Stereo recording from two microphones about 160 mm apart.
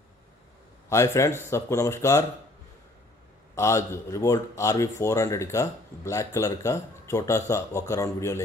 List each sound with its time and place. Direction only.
0.8 s speech: 20° left (ahead or behind)
3.5 s speech: 15° left (ahead or behind)